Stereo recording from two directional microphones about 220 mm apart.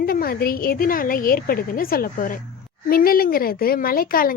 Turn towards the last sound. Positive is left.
turn(degrees=40)  # may be behind; listen again after turning